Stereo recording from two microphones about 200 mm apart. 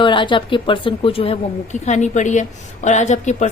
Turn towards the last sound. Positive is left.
turn(degrees=35)  # may be behind; listen again after turning